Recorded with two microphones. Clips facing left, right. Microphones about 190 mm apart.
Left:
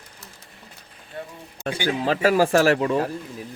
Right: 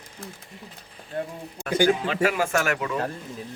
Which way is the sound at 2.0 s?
35° left (ahead or behind).